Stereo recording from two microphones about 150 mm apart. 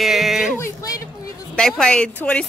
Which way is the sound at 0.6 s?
20° left (ahead or behind).